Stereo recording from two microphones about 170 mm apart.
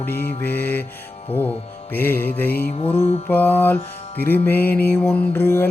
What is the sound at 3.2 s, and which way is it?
Mantra, 10° left (ahead or behind).